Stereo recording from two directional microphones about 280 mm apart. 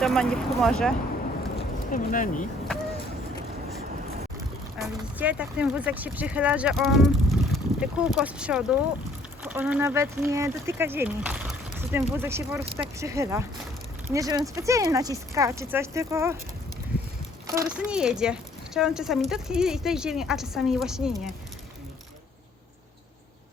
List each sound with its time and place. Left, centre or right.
0.0 s speech: centre
1.9 s speech: left
4.8 s speech: centre
17.4 s speech: centre